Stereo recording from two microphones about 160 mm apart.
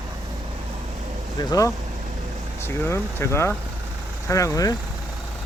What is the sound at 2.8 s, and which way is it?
Speech, 15° left (ahead or behind).